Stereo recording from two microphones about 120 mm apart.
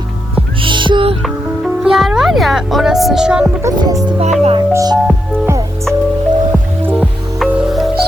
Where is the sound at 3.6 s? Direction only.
25° right (ahead or behind).